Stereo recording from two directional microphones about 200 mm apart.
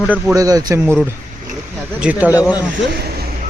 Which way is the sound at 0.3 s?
20° right (ahead or behind).